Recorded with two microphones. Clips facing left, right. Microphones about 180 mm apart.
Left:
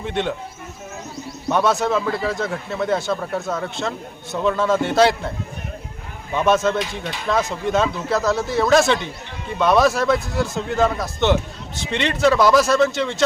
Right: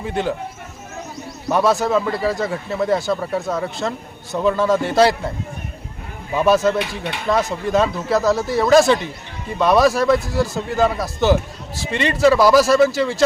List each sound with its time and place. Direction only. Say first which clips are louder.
0.0 s speech: right 1 dB; centre (ahead or behind)
1.5 s speech: right 2 dB; centre (ahead or behind)
6.3 s speech: right 2 dB; centre (ahead or behind)
6.7 s speech: right 2 dB; 65° right (ahead or behind)
7.3 s speech: right 2 dB; centre (ahead or behind)